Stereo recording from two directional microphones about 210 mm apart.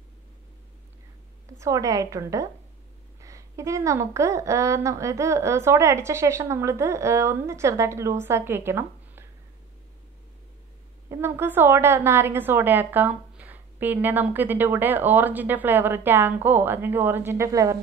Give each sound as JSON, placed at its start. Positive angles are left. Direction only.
{"t": 1.6, "sound": "a woman's voice", "side_deg": -15}
{"t": 11.1, "sound": "a woman's voice", "side_deg": -10}